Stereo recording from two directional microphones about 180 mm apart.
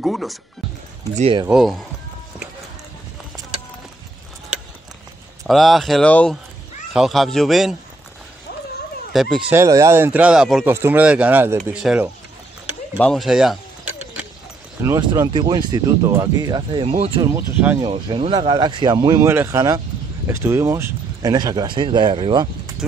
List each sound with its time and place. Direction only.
0.0 s speech: centre (ahead or behind)
1.5 s speech: centre (ahead or behind)
5.5 s speech: centre (ahead or behind)
9.1 s speech: centre (ahead or behind)
9.5 s speech: 15° right (ahead or behind)
14.8 s speech: 15° right (ahead or behind)
16.9 s speech: 35° right (ahead or behind)
17.2 s speech: 15° right (ahead or behind)
17.7 s speech: 25° right (ahead or behind)